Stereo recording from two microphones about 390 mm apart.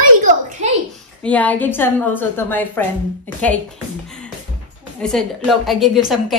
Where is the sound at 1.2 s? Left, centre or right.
Centre.